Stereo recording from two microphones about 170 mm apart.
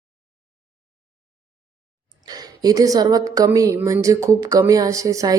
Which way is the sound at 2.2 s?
25° right (ahead or behind).